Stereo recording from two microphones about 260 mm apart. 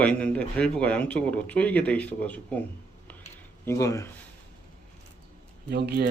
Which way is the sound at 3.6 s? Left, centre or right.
Centre.